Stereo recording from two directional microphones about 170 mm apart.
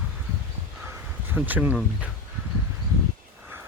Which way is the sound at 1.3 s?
10° right (ahead or behind).